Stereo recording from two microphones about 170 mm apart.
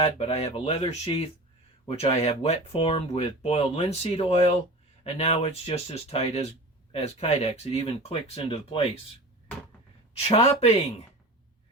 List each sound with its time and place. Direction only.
0.0 s speech: 35° left (ahead or behind)
1.9 s speech: 35° left (ahead or behind)
10.2 s speech: 35° left (ahead or behind)